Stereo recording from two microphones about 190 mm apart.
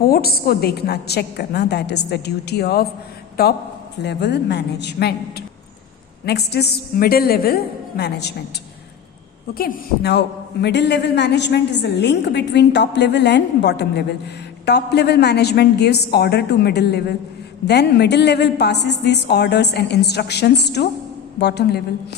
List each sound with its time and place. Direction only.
0.0 s a man's voice: 55° left (ahead or behind)
4.0 s a man's voice: 65° left (ahead or behind)
6.2 s a man's voice: 60° left (ahead or behind)
9.6 s a man's voice: 55° left (ahead or behind)